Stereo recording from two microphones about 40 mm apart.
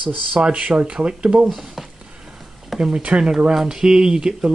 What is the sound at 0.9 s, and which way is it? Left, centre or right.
Speech, centre.